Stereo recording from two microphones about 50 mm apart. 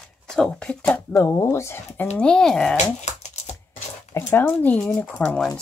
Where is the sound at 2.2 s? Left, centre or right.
Centre.